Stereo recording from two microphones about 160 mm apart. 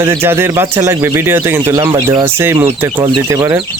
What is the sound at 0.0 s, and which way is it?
Speech, 15° right (ahead or behind).